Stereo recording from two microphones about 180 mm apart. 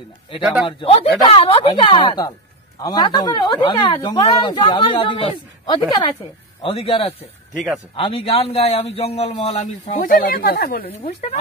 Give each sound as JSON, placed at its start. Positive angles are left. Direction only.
{"t": 0.7, "sound": "a man's voice", "side_deg": 30}
{"t": 10.9, "sound": "a man's voice", "side_deg": 35}